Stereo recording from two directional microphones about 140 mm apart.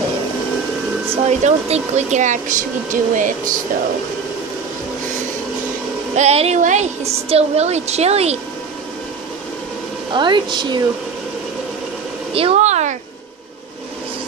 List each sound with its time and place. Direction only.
1.1 s speech: 50° right (ahead or behind); by 3.5 s 65° right (ahead or behind)
6.1 s a woman's voice: 50° right (ahead or behind)
10.1 s a woman's voice: 35° right (ahead or behind)
12.4 s a sound: 50° right (ahead or behind)